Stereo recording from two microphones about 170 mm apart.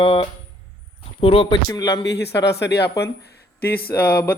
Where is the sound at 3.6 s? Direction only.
65° left (ahead or behind).